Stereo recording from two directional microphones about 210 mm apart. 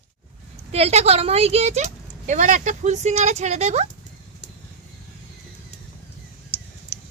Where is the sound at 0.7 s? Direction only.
30° right (ahead or behind).